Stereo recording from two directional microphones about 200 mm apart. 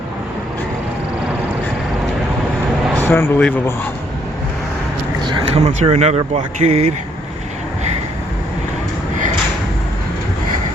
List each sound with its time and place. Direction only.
3.0 s speech: 10° left (ahead or behind)
5.2 s speech: 25° right (ahead or behind)